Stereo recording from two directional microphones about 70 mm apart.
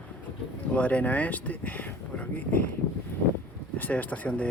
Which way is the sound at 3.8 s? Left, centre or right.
Left.